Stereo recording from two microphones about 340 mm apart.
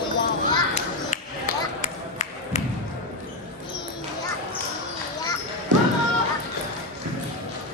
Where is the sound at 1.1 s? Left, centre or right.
Left.